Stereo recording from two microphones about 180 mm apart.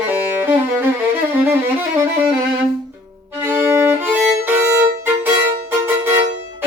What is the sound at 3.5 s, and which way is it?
Violin, 10° right (ahead or behind).